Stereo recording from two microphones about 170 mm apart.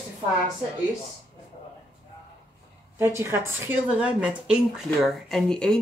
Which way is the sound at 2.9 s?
15° right (ahead or behind).